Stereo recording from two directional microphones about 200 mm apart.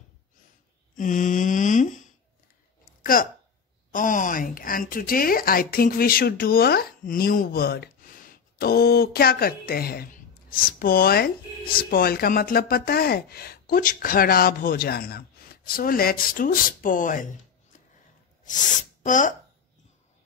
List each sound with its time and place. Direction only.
0.9 s mantra: 40° left (ahead or behind)
3.0 s a sound: 45° left (ahead or behind)
3.9 s a woman's voice: 40° left (ahead or behind)
18.4 s speech: 40° left (ahead or behind)